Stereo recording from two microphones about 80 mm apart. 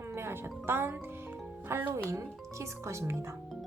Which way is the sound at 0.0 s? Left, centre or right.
Right.